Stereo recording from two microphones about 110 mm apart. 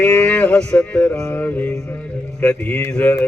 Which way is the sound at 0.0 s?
10° left (ahead or behind).